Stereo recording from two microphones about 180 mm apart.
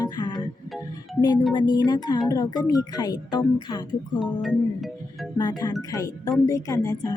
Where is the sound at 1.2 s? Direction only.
25° left (ahead or behind).